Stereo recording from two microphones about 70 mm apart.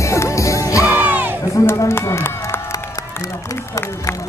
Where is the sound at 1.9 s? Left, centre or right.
Left.